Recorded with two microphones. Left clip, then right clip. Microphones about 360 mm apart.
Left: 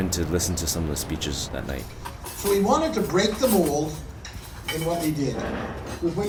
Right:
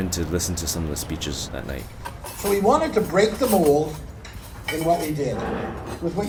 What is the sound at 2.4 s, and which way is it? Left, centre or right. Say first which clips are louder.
Speech: right 2 dB; right.